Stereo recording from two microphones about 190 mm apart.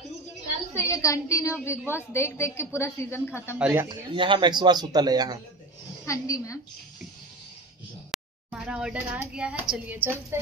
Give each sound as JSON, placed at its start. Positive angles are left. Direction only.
{"t": 0.8, "sound": "a woman's voice", "side_deg": 15}
{"t": 3.5, "sound": "speech", "side_deg": -5}
{"t": 3.9, "sound": "a man's voice", "side_deg": -25}
{"t": 6.0, "sound": "a woman's voice", "side_deg": 15}
{"t": 8.1, "sound": "a woman's voice", "side_deg": -5}